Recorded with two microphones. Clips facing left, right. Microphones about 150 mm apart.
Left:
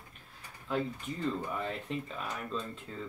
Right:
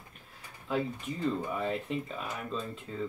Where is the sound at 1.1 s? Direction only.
5° right (ahead or behind).